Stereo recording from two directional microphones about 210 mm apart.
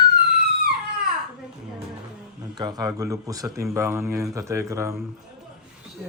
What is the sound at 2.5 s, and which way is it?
Speech, 20° right (ahead or behind).